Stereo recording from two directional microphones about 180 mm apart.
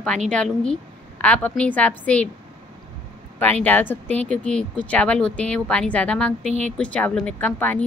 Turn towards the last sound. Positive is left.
turn(degrees=10)  # may be behind; listen again after turning